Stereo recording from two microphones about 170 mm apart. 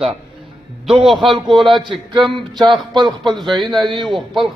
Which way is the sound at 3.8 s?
30° right (ahead or behind).